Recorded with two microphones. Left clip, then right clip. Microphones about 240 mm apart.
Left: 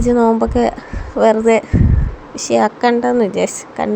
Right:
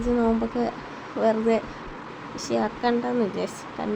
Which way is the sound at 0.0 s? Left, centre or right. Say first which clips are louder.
Left 11 dB; left.